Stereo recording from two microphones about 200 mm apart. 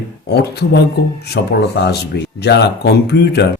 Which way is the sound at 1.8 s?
60° left (ahead or behind).